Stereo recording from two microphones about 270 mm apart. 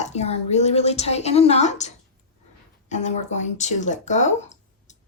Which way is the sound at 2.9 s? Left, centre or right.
Left.